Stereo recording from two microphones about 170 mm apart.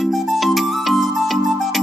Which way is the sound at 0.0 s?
Centre (ahead or behind).